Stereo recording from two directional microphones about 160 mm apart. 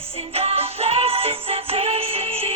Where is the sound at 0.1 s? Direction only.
40° right (ahead or behind).